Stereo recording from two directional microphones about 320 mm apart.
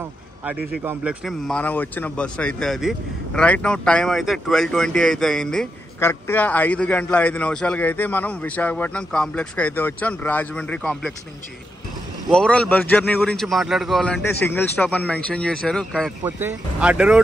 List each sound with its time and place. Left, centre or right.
0.5 s a man's voice: centre
12.3 s a man's voice: centre